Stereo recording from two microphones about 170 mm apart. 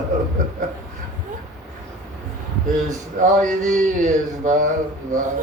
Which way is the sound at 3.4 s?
50° right (ahead or behind).